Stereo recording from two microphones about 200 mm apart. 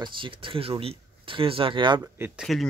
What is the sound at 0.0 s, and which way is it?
Speech, 25° right (ahead or behind).